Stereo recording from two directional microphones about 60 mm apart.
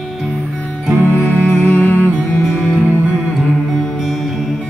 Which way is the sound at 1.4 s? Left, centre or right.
Left.